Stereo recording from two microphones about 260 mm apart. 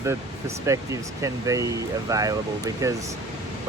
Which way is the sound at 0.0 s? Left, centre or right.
Centre.